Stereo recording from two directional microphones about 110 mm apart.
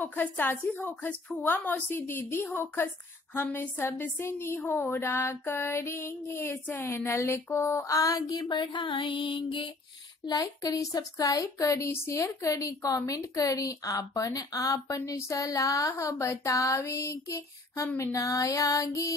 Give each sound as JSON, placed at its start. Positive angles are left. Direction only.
{"t": 0.0, "sound": "speech", "side_deg": 15}
{"t": 10.2, "sound": "speech", "side_deg": 35}
{"t": 17.9, "sound": "music", "side_deg": 30}